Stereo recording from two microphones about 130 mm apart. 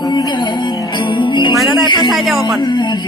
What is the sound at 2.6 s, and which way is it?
Music, 35° left (ahead or behind).